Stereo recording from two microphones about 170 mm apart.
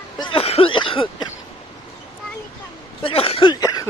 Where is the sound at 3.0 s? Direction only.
35° left (ahead or behind).